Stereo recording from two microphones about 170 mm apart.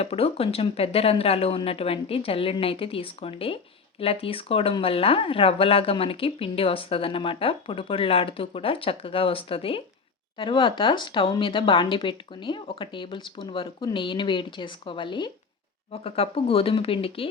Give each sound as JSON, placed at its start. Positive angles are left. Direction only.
{"t": 0.0, "sound": "speech", "side_deg": 35}